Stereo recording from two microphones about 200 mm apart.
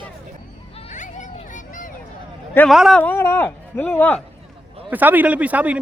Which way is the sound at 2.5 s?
Centre (ahead or behind).